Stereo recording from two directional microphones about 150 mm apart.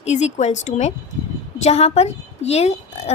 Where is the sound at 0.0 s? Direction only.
50° left (ahead or behind).